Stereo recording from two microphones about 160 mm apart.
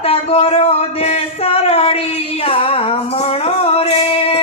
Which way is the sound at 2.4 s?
35° left (ahead or behind).